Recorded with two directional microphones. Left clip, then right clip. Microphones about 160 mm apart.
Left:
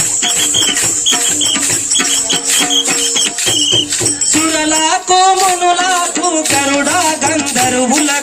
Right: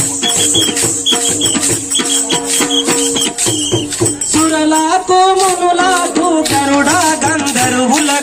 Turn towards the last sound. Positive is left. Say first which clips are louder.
# right 2 dB
turn(degrees=30)  # may be behind; listen again after turning